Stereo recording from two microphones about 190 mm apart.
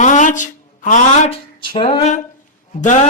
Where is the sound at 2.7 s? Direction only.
40° left (ahead or behind).